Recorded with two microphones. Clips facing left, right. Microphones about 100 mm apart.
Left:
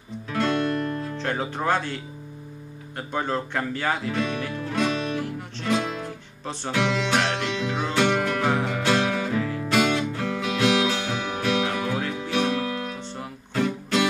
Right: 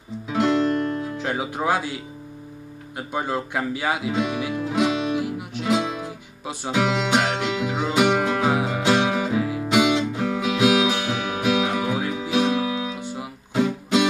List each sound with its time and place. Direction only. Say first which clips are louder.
0.3 s music: right 4 dB; 15° right (ahead or behind)
1.0 s speech: right 1 dB; 10° right (ahead or behind)
3.0 s music: right 1 dB; 10° right (ahead or behind)